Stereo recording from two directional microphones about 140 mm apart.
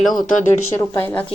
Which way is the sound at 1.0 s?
15° left (ahead or behind).